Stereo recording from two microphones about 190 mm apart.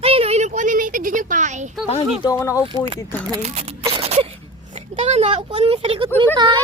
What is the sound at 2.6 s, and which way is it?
Speech, 25° right (ahead or behind).